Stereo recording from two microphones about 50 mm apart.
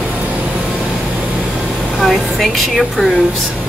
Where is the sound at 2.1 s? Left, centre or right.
Centre.